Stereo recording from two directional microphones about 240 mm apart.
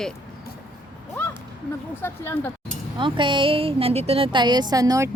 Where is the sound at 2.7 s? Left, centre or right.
Centre.